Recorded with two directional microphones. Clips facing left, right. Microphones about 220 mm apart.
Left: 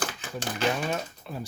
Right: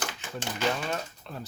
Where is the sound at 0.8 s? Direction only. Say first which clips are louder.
Left 3 dB; 10° left (ahead or behind).